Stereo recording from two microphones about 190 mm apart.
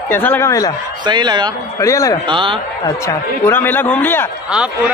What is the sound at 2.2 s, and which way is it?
Speech, 25° right (ahead or behind).